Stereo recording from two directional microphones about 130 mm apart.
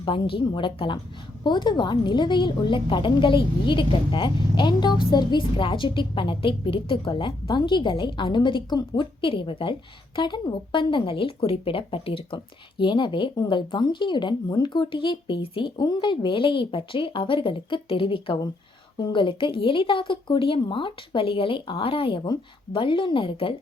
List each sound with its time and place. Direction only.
0.0 s a woman's voice: 40° left (ahead or behind)